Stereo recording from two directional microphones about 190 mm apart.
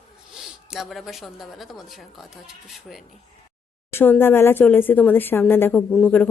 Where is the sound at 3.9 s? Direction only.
10° left (ahead or behind).